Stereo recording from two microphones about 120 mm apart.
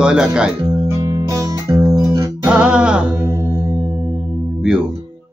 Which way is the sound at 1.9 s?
30° right (ahead or behind).